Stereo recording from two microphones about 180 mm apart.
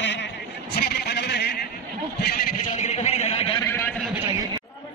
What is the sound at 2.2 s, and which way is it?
Speech, 55° left (ahead or behind).